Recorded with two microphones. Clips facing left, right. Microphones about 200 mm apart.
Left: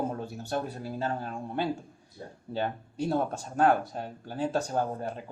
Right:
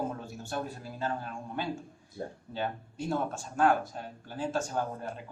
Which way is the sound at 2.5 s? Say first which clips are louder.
Left 6 dB; 35° left (ahead or behind).